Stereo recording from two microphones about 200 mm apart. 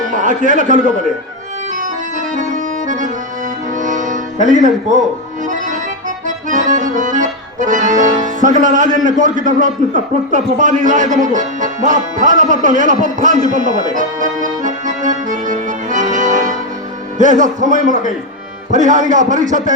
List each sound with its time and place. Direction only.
0.1 s a man's voice: 40° right (ahead or behind)
1.8 s accordion: 40° right (ahead or behind)
3.8 s music: 40° right (ahead or behind)
4.4 s speech: 40° left (ahead or behind)
5.5 s accordion: 40° right (ahead or behind)
9.0 s a man's voice: 40° right (ahead or behind)